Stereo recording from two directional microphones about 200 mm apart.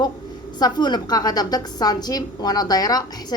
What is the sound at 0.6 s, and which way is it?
A woman's voice, 20° left (ahead or behind).